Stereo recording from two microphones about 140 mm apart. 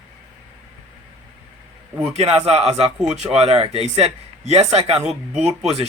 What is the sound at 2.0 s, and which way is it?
Speech, 50° right (ahead or behind).